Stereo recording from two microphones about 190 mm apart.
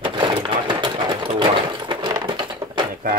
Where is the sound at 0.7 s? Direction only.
25° right (ahead or behind).